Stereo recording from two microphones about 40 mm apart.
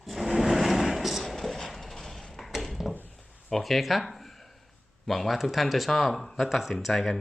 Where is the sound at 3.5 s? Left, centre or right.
Centre.